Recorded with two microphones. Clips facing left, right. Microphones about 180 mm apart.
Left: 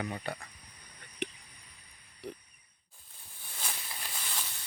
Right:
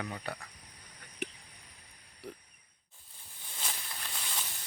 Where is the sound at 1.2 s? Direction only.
5° right (ahead or behind).